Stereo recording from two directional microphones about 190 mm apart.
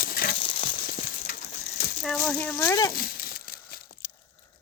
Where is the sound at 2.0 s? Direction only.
5° left (ahead or behind).